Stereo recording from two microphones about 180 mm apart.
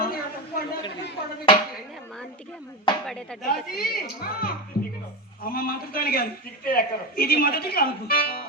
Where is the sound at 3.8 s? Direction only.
55° left (ahead or behind).